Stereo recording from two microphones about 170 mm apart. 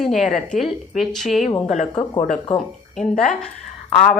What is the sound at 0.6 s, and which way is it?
Speech, centre (ahead or behind).